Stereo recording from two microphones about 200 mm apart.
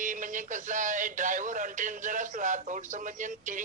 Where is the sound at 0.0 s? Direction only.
40° right (ahead or behind).